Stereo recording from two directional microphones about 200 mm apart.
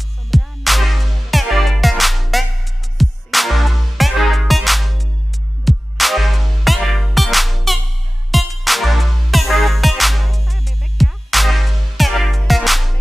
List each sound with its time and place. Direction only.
0.3 s music: centre (ahead or behind)